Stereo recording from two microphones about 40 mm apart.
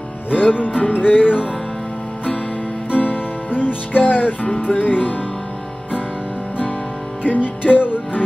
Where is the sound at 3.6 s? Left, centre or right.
Left.